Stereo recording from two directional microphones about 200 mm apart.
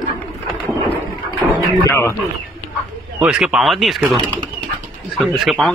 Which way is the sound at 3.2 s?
5° right (ahead or behind).